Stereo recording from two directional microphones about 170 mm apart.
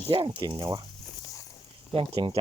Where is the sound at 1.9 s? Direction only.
30° right (ahead or behind).